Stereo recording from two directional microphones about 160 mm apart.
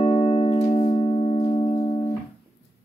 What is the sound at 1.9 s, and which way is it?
Music, 25° left (ahead or behind).